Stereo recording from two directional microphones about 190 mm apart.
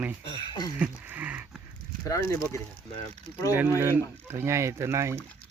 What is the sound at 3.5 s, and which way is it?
Speech, 10° right (ahead or behind).